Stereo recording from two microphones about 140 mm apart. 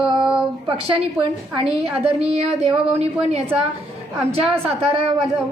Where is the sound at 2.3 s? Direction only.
50° right (ahead or behind).